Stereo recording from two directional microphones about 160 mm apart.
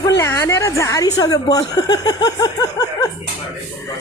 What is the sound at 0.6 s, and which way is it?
Speech, 20° left (ahead or behind).